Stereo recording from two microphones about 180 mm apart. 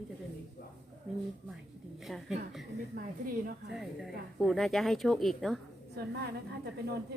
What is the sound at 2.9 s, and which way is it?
Speech, 50° right (ahead or behind).